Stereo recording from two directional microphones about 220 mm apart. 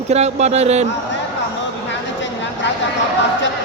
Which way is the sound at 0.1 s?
30° right (ahead or behind).